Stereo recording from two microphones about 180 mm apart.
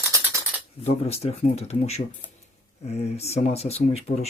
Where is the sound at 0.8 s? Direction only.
35° left (ahead or behind).